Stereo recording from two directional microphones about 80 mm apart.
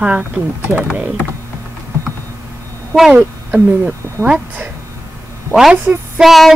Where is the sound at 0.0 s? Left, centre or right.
Centre.